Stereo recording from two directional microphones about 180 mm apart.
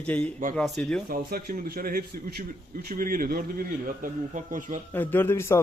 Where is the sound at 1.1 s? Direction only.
55° right (ahead or behind).